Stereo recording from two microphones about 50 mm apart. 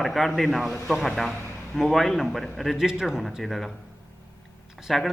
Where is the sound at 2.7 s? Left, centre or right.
Centre.